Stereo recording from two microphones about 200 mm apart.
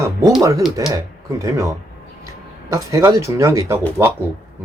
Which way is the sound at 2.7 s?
15° right (ahead or behind).